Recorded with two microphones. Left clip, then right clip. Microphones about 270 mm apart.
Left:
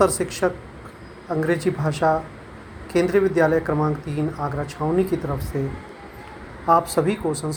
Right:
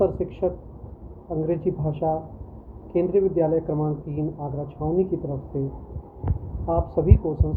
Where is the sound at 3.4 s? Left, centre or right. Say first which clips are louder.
Left 4 dB; left.